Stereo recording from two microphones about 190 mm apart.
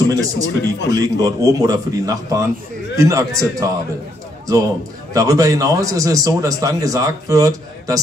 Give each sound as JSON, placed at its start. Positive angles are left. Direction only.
{"t": 0.1, "sound": "a man's voice", "side_deg": -20}
{"t": 5.1, "sound": "a man's voice", "side_deg": -20}